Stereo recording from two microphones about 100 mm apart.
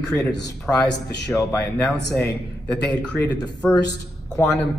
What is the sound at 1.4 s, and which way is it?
A man's voice, 25° left (ahead or behind).